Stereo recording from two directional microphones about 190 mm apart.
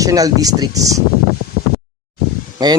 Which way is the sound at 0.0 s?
20° right (ahead or behind).